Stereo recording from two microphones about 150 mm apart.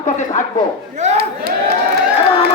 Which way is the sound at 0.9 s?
50° right (ahead or behind).